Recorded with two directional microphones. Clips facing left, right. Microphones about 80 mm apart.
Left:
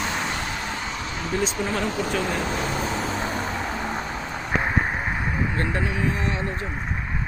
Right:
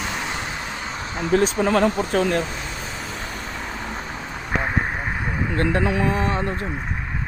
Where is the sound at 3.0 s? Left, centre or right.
Left.